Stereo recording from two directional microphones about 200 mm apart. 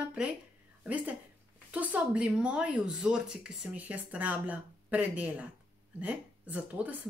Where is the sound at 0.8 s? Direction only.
5° right (ahead or behind).